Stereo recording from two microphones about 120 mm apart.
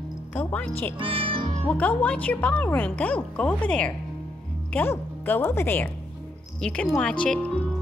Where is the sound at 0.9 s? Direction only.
50° right (ahead or behind).